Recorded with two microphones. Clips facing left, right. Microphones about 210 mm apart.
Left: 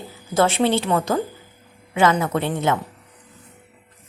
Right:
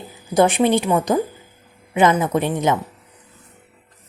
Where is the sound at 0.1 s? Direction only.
15° right (ahead or behind).